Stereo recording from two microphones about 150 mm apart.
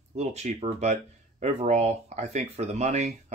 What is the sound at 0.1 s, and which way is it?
Speech, 45° right (ahead or behind).